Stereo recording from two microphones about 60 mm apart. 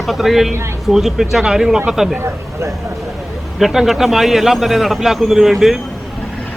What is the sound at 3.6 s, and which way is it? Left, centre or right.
A man's voice, centre.